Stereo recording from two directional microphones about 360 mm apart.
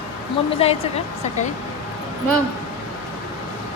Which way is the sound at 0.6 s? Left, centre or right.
Centre.